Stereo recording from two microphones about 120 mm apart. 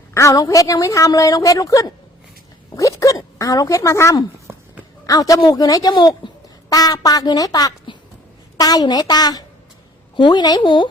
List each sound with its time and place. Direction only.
0.1 s a woman's voice: 25° left (ahead or behind)
4.4 s dog: 15° right (ahead or behind)
5.0 s a woman's voice: 30° left (ahead or behind)